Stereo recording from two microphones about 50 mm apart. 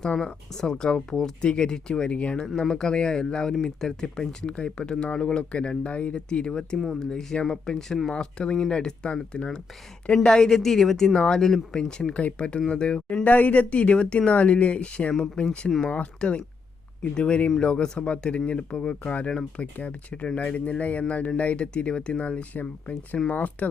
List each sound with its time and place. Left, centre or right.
0.0 s speech: centre
6.7 s speech: centre
7.0 s speech: centre
13.2 s speech: left